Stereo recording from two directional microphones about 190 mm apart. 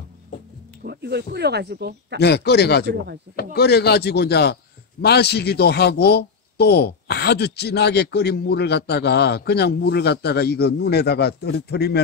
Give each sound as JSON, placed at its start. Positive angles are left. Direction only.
{"t": 0.8, "sound": "speech", "side_deg": -60}
{"t": 2.1, "sound": "a man's voice", "side_deg": 60}